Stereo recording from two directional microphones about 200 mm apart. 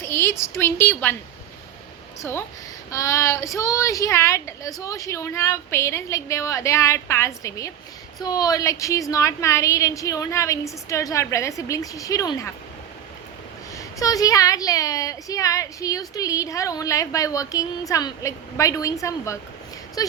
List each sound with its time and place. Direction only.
0.0 s a woman's voice: 10° left (ahead or behind)
2.9 s speech: 15° left (ahead or behind)
13.7 s speech: 15° left (ahead or behind)